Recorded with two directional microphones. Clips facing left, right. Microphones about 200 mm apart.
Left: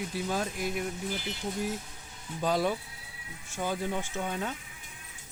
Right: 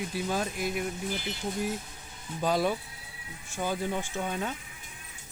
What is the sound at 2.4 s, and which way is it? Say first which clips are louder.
Speech: right 1 dB; 10° right (ahead or behind).